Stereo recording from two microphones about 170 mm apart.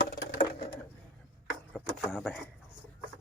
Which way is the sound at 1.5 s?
Centre (ahead or behind).